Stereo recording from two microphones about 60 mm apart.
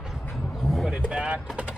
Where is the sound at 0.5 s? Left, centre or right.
Centre.